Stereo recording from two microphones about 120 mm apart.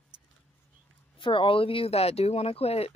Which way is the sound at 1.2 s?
45° left (ahead or behind).